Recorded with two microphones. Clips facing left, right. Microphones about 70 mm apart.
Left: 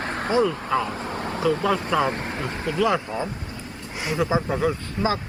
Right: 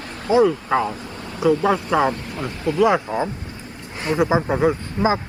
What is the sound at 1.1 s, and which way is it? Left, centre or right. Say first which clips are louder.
Vehicle: left 5 dB; left.